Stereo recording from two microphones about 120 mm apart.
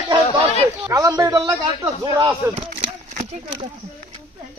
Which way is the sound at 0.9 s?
25° right (ahead or behind).